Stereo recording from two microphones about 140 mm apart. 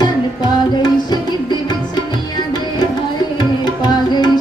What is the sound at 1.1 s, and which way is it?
Music, 30° left (ahead or behind).